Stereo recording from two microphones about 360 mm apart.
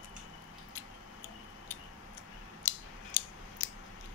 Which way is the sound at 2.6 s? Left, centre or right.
Left.